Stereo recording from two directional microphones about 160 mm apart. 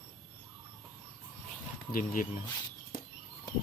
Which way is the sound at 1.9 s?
60° left (ahead or behind).